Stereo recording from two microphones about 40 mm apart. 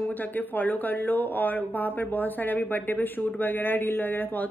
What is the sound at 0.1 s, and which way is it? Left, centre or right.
A woman's voice, left.